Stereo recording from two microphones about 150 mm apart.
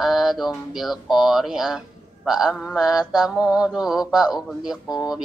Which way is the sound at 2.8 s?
25° left (ahead or behind).